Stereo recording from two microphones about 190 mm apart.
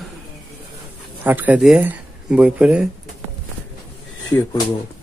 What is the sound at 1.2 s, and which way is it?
Speech, 10° right (ahead or behind).